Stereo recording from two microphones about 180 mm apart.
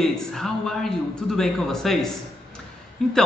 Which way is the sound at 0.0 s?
Centre (ahead or behind).